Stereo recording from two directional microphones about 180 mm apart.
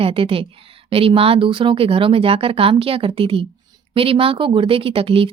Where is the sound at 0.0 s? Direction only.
30° right (ahead or behind).